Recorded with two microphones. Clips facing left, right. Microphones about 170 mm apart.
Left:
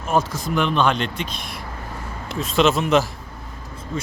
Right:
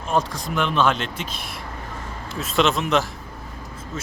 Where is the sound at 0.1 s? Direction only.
5° left (ahead or behind).